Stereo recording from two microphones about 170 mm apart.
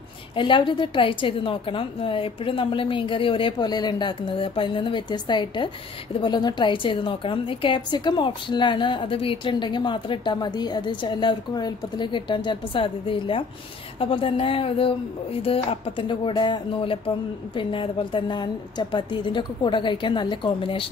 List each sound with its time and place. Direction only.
0.4 s a woman's voice: 30° left (ahead or behind)